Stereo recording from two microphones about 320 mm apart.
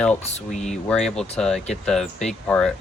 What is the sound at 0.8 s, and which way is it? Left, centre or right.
Speech, centre.